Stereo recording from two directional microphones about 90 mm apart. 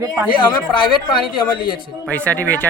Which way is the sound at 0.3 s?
65° left (ahead or behind).